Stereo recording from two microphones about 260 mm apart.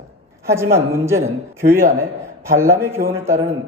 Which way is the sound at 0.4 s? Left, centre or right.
Centre.